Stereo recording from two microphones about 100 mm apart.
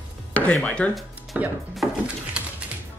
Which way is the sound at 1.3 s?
15° right (ahead or behind).